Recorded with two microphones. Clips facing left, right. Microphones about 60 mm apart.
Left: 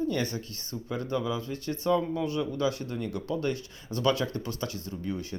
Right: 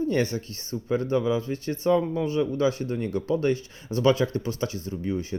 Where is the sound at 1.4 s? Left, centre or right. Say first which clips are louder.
Right 4 dB; right.